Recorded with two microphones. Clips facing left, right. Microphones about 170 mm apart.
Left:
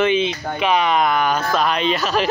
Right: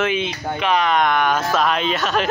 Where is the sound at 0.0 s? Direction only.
5° right (ahead or behind).